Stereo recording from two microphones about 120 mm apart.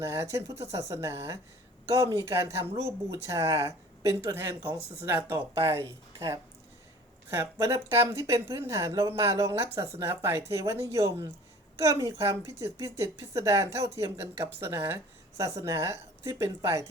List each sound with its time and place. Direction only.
0.0 s speech: 25° right (ahead or behind)